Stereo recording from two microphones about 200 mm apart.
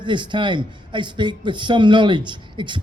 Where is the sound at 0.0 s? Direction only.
25° right (ahead or behind).